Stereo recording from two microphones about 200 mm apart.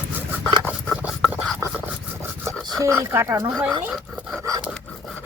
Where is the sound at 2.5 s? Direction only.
Centre (ahead or behind).